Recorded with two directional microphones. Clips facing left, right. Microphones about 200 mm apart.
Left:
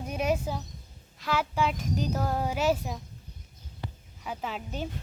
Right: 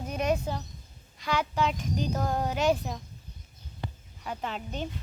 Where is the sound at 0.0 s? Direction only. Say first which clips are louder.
Even; 10° left (ahead or behind).